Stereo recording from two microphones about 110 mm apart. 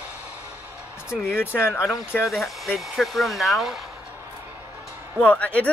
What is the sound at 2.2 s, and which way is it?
Speech, centre (ahead or behind).